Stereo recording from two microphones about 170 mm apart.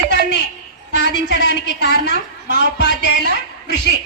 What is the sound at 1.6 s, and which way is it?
Speech, 85° left.